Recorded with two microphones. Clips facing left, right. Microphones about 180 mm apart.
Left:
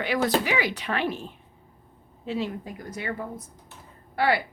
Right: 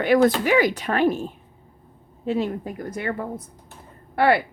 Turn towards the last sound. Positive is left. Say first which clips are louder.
# right 5 dB
turn(degrees=-55)  # may be behind; listen again after turning